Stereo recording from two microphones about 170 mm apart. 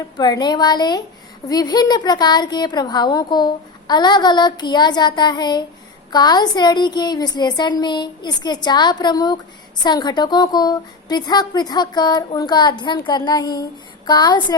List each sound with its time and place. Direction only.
0.2 s a woman's voice: 25° left (ahead or behind)